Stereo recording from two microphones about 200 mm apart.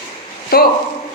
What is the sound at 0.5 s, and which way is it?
Speech, 50° left (ahead or behind).